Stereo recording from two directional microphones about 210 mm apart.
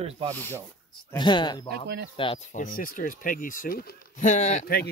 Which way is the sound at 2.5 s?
40° left (ahead or behind).